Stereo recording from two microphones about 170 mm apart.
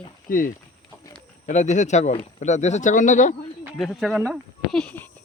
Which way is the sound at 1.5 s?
45° left (ahead or behind).